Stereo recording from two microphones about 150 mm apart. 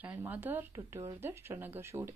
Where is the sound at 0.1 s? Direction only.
15° right (ahead or behind).